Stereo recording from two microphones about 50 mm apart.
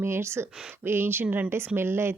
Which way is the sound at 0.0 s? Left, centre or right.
Right.